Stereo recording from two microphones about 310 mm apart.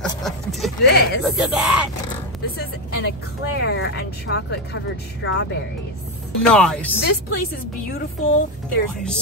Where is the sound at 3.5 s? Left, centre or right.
Left.